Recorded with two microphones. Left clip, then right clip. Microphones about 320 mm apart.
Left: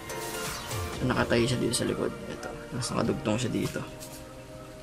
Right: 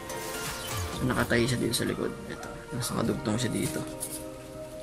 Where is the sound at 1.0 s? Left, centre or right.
Centre.